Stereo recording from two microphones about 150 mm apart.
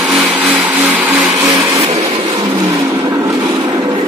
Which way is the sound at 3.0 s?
25° right (ahead or behind).